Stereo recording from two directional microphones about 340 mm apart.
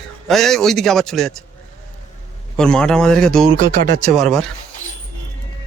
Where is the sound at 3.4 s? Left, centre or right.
Right.